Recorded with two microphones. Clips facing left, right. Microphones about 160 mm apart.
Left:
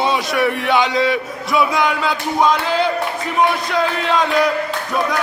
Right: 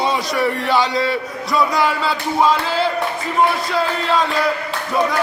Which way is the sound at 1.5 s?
Centre (ahead or behind).